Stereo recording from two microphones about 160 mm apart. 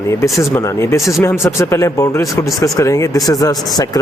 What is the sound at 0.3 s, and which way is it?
Speech, 20° left (ahead or behind).